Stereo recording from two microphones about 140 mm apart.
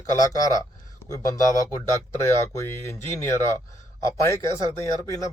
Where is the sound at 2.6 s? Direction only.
20° left (ahead or behind).